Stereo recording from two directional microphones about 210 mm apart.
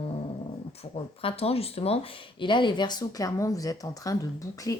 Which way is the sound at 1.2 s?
30° left (ahead or behind).